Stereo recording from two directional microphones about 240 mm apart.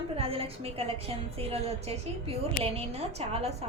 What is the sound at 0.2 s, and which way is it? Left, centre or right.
A woman's voice, right.